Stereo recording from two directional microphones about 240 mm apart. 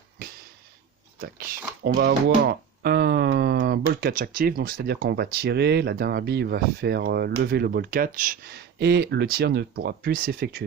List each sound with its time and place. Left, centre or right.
1.2 s speech: right